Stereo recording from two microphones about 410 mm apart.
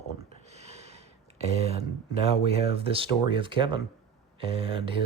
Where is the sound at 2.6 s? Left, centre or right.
Centre.